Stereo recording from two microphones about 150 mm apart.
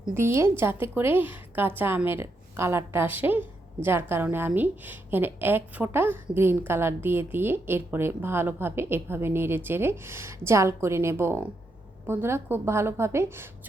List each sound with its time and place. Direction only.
0.1 s a woman's voice: 15° right (ahead or behind)